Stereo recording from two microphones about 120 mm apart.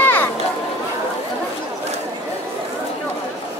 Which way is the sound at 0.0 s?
15° left (ahead or behind).